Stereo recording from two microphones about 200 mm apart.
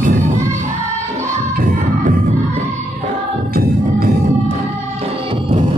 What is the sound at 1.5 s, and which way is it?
Music, 45° right (ahead or behind).